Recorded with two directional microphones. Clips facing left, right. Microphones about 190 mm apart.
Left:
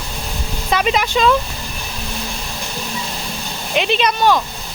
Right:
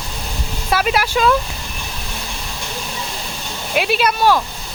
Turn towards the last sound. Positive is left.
turn(degrees=-5)  # may be behind; listen again after turning